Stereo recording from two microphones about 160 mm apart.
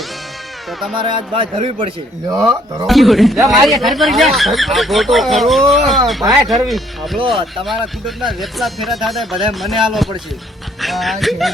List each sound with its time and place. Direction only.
0.9 s speech: 30° right (ahead or behind)
2.3 s speech: 25° right (ahead or behind)
2.8 s speech: centre (ahead or behind)